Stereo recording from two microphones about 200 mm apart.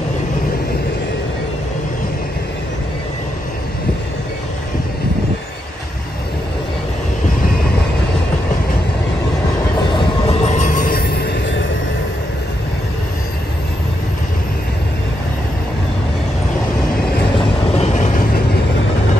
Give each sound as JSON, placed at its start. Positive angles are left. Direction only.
{"t": 9.9, "sound": "train", "side_deg": 35}
{"t": 17.7, "sound": "vehicle", "side_deg": 35}